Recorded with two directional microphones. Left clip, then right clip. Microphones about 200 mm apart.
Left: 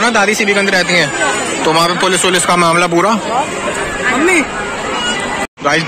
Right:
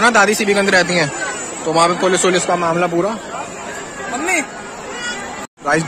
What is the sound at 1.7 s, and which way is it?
Speech, centre (ahead or behind).